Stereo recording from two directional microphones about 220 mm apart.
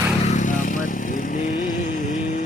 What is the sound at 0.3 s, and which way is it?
Vehicle, 35° left (ahead or behind).